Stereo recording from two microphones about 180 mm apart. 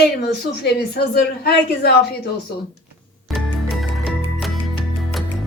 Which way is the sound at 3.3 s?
Centre (ahead or behind).